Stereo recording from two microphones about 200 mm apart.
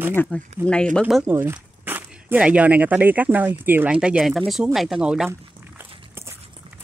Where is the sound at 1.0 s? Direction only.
5° right (ahead or behind).